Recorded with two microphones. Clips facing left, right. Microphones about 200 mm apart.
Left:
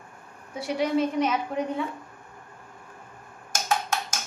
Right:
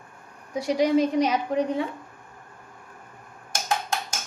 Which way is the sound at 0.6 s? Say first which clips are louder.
Right 4 dB; 40° right (ahead or behind).